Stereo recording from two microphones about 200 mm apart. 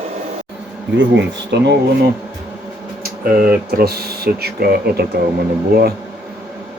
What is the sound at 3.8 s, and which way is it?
Speech, 50° right (ahead or behind).